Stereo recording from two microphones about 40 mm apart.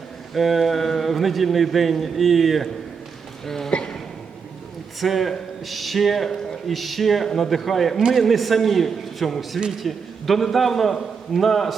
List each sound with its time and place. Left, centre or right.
0.3 s a man's voice: centre
3.7 s a sound: left
4.9 s a man's voice: centre
7.3 s speech: centre
7.5 s a man's voice: centre